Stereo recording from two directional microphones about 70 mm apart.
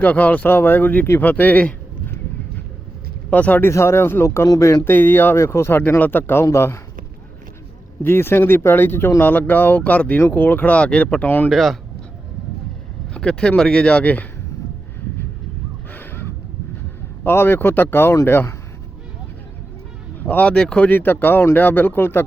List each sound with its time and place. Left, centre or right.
0.0 s speech: left
3.2 s speech: left
3.7 s speech: left
4.4 s speech: left
4.9 s speech: left
8.0 s speech: left
11.4 s speech: centre
13.1 s speech: centre
15.9 s a sound: left
17.2 s speech: left
20.1 s speech: left